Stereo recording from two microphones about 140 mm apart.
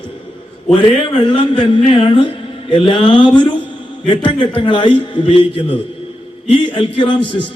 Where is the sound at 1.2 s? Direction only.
35° left (ahead or behind).